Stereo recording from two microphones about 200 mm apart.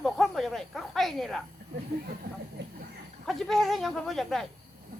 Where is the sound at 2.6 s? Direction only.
60° right (ahead or behind).